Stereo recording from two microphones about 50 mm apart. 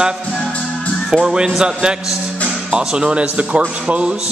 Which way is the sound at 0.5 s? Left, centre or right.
Left.